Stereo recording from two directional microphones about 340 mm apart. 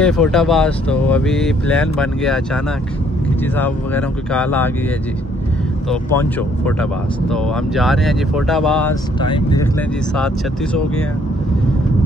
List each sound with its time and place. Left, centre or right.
0.0 s speech: centre
5.9 s speech: centre
9.2 s speech: centre
10.1 s speech: centre